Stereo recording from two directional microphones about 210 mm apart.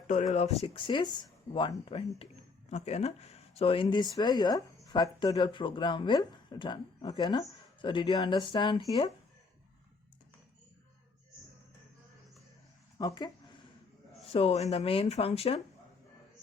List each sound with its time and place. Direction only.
0.1 s speech: 35° left (ahead or behind)
13.0 s speech: 20° left (ahead or behind)